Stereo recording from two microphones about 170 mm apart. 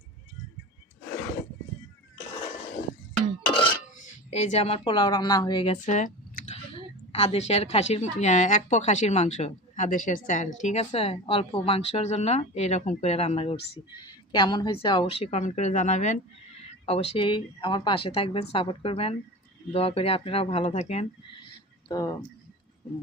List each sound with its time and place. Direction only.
3.9 s speech: 45° left (ahead or behind); by 5.7 s 25° left (ahead or behind)
5.7 s speech: 45° left (ahead or behind)
14.3 s speech: 25° left (ahead or behind); by 16.2 s 45° left (ahead or behind)
16.6 s a sound: 35° left (ahead or behind)
17.2 s speech: 30° left (ahead or behind)
21.8 s speech: 20° left (ahead or behind)